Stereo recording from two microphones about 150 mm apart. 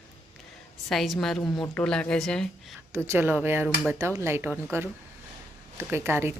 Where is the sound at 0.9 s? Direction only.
Centre (ahead or behind).